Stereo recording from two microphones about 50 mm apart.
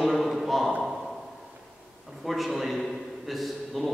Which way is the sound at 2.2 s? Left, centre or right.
Centre.